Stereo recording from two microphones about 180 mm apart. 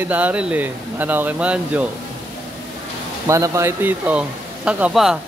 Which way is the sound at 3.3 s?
15° right (ahead or behind).